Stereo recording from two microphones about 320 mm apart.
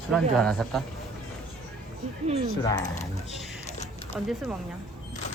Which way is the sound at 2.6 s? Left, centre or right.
Centre.